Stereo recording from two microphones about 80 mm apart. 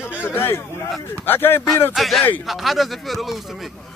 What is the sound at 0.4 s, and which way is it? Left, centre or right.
Speech, left.